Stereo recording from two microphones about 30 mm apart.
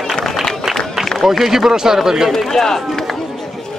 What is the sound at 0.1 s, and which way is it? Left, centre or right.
Run, centre.